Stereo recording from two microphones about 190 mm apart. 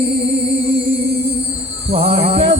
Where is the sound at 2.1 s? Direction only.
30° right (ahead or behind).